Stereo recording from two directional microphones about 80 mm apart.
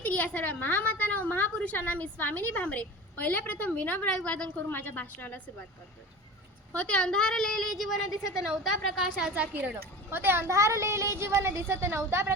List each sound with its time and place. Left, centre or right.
0.0 s a woman's voice: centre
4.5 s a woman's voice: left
6.7 s a woman's voice: centre
9.3 s a woman's voice: right